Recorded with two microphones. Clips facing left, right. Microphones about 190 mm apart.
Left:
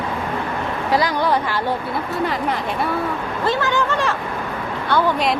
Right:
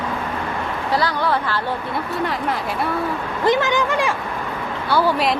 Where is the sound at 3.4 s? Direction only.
15° right (ahead or behind).